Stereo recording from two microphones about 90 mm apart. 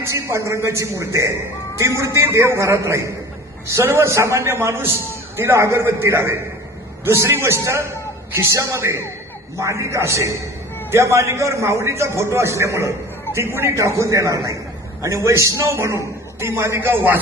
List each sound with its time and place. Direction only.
0.0 s a man's voice: 30° right (ahead or behind)